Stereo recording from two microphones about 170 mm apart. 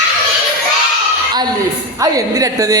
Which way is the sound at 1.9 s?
20° right (ahead or behind).